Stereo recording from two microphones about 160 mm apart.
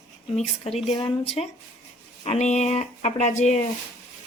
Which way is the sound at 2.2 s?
45° left (ahead or behind).